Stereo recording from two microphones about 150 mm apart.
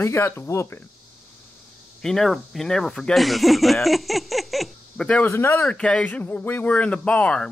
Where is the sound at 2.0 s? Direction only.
5° left (ahead or behind).